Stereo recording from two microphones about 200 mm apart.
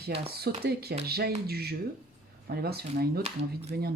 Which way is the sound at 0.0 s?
50° right (ahead or behind).